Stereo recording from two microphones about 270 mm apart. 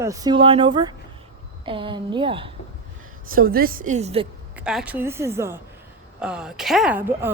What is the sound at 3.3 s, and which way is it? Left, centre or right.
Speech, right.